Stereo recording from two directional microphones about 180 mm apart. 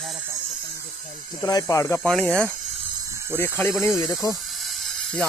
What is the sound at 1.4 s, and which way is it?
Speech, 20° left (ahead or behind).